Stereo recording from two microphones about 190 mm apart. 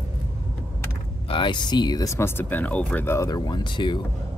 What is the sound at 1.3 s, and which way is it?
Speech, 25° left (ahead or behind).